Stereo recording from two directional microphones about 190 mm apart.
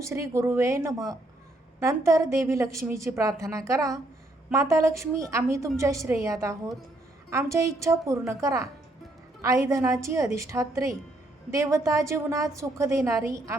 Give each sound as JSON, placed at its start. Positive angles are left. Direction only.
{"t": 0.0, "sound": "a woman's voice", "side_deg": -15}